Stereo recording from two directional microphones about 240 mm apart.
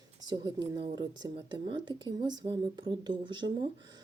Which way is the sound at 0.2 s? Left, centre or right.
Centre.